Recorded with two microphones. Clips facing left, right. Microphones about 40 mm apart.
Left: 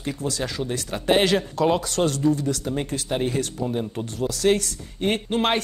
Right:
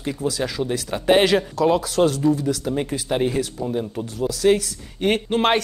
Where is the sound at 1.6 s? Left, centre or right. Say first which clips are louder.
Right 2 dB; centre.